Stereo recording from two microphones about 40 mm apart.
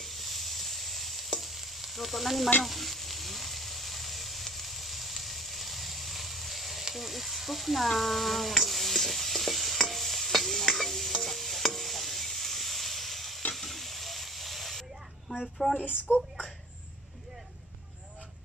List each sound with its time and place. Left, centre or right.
0.0 s stir: centre
2.6 s frying: centre
13.6 s hiss: centre
16.1 s speech: centre